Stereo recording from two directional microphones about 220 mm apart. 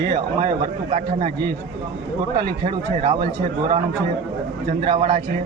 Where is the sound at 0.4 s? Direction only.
30° right (ahead or behind).